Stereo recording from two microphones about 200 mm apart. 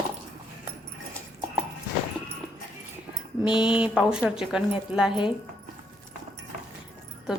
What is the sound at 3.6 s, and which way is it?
A woman's voice, 5° right (ahead or behind).